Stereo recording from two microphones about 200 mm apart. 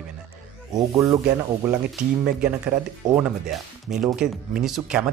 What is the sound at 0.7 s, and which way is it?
Speech, 15° right (ahead or behind).